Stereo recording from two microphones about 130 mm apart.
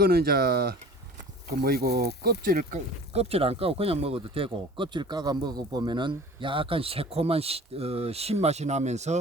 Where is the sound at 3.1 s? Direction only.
50° right (ahead or behind).